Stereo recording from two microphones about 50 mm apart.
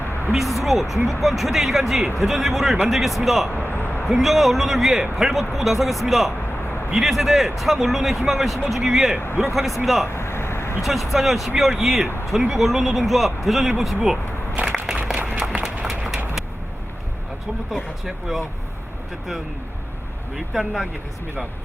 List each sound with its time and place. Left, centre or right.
0.3 s speech: centre
3.5 s a sound: left
4.2 s speech: centre
10.2 s vehicle: left
10.8 s speech: centre
14.5 s crushing: right
15.2 s a sound: right
16.0 s vehicle: centre
17.7 s speech: centre
20.3 s speech: centre